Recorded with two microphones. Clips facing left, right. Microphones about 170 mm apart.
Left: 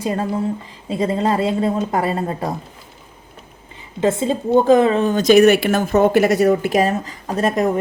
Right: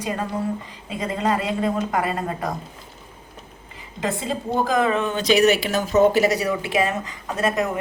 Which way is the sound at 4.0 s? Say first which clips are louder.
Left 8 dB; 25° left (ahead or behind).